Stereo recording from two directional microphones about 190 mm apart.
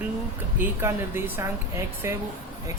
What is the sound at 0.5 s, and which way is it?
Speech, 10° right (ahead or behind).